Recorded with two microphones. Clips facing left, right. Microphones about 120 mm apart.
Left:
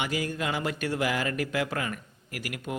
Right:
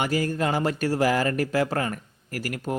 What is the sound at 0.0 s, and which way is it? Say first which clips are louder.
Speech: right 6 dB; 45° right (ahead or behind).